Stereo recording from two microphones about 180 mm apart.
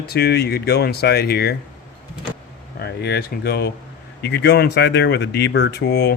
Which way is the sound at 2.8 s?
65° left (ahead or behind).